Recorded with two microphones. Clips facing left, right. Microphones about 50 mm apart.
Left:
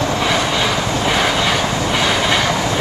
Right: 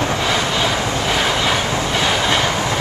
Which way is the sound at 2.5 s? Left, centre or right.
Right.